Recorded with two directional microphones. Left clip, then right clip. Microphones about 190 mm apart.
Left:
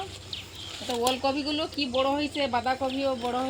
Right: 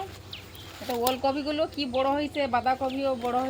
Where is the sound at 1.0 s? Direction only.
10° right (ahead or behind).